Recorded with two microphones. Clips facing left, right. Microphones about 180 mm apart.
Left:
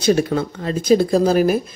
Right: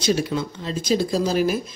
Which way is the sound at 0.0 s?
50° left (ahead or behind).